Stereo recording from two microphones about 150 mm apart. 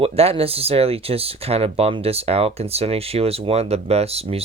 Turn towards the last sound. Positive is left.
turn(degrees=-40)  # may be behind; listen again after turning